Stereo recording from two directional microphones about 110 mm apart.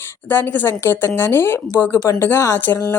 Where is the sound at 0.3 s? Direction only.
20° left (ahead or behind).